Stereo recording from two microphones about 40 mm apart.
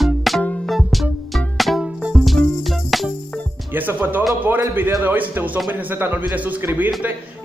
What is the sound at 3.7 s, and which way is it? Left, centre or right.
Music, right.